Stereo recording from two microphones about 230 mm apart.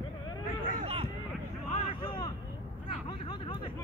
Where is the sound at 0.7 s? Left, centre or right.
Right.